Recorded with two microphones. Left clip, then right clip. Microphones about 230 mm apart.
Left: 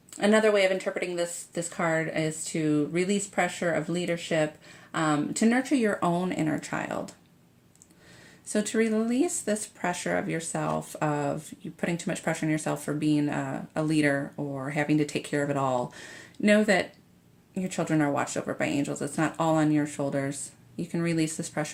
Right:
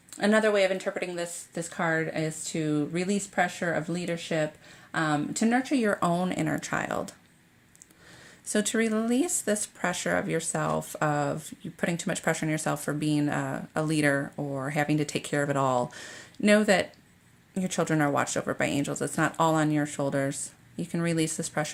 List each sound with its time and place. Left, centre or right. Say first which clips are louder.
0.2 s speech: left 1 dB; right
8.4 s speech: even; right